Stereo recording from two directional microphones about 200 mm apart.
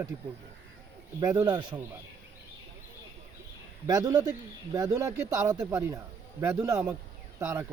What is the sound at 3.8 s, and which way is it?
Speech, 20° right (ahead or behind).